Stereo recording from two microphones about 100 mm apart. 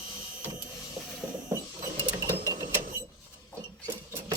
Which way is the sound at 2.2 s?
30° right (ahead or behind).